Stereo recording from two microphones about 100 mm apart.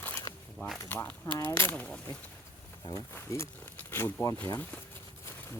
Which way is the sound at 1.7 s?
10° left (ahead or behind).